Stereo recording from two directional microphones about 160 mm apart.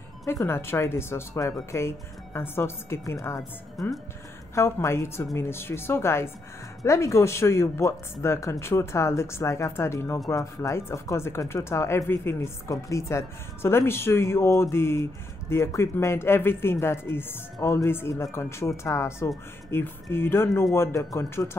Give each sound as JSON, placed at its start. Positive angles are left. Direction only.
{"t": 0.3, "sound": "speech", "side_deg": 15}
{"t": 3.8, "sound": "speech", "side_deg": 0}
{"t": 4.6, "sound": "speech", "side_deg": 15}